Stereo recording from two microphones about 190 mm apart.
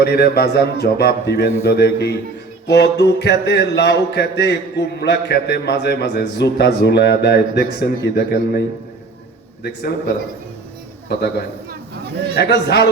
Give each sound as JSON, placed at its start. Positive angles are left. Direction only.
{"t": 0.0, "sound": "speech", "side_deg": 55}
{"t": 11.1, "sound": "speech", "side_deg": 60}